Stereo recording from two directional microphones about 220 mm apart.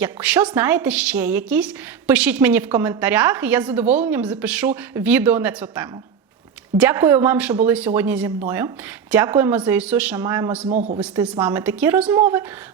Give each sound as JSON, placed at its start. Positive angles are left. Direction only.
{"t": 0.0, "sound": "a woman's voice", "side_deg": -5}
{"t": 10.7, "sound": "a man's voice", "side_deg": -35}
{"t": 11.0, "sound": "a woman's voice", "side_deg": -5}